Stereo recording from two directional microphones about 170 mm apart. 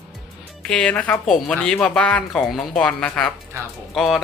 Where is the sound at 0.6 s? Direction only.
5° left (ahead or behind).